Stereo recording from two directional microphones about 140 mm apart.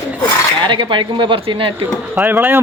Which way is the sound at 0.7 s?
35° right (ahead or behind).